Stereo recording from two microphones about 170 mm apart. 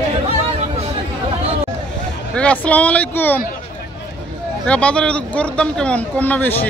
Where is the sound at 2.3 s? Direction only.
10° left (ahead or behind).